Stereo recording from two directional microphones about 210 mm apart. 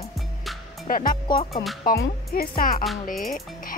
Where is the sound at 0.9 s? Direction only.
40° left (ahead or behind).